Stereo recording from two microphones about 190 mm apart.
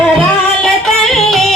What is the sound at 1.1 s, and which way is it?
Yodeling, centre (ahead or behind).